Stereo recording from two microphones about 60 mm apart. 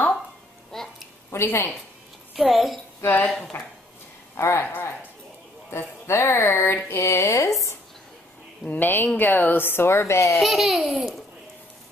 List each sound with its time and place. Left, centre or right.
0.7 s a sound: centre
1.3 s a woman's voice: left
2.3 s a woman's voice: centre
3.0 s speech: left
3.3 s a woman's voice: centre
4.4 s a woman's voice: left
5.7 s speech: left
8.6 s a child's voice: left
10.4 s a woman's voice: centre